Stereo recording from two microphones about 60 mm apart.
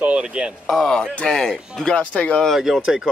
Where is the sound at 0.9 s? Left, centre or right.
Centre.